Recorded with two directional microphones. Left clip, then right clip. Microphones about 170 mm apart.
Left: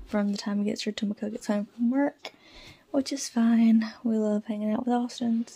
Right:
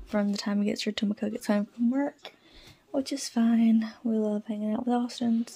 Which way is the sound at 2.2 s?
20° left (ahead or behind).